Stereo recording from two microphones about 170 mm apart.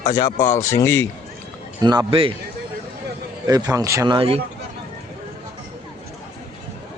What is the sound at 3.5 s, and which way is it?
Speech, 20° right (ahead or behind).